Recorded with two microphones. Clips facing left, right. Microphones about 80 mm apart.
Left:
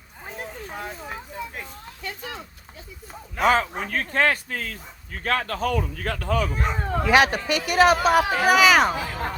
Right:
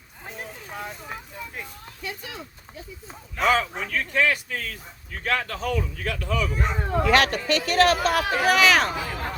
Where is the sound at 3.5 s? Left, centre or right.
Left.